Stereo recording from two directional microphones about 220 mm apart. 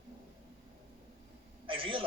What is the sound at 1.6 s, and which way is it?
Speech, 25° right (ahead or behind).